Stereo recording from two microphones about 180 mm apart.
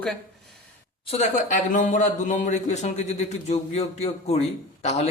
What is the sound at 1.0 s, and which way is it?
Speech, 35° left (ahead or behind).